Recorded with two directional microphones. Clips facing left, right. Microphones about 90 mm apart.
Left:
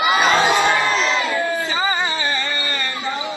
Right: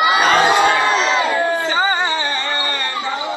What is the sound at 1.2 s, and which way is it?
Music, 35° right (ahead or behind).